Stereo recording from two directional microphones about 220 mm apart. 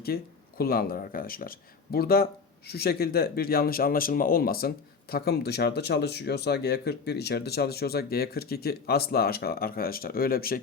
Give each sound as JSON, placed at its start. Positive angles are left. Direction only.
{"t": 0.1, "sound": "speech", "side_deg": 45}